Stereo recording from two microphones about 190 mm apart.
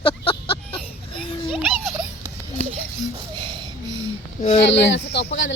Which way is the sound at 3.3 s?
25° right (ahead or behind).